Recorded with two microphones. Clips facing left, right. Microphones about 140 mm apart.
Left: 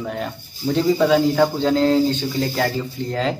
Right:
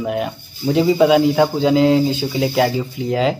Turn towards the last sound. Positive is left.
turn(degrees=-5)  # may be behind; listen again after turning